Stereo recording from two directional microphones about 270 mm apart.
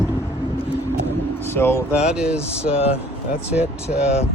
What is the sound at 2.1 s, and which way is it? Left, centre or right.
Speech, centre.